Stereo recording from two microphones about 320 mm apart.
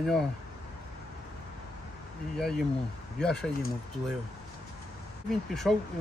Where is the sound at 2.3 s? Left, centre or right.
Centre.